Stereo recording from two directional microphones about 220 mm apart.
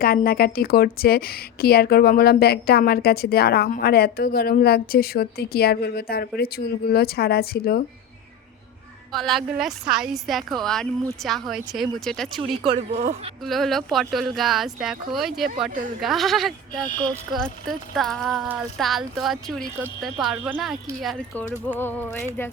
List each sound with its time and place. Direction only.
0.0 s a woman's voice: 45° left (ahead or behind)
9.1 s a woman's voice: centre (ahead or behind)
12.6 s speech: 30° right (ahead or behind)
13.4 s a woman's voice: centre (ahead or behind)
21.7 s music: 10° left (ahead or behind)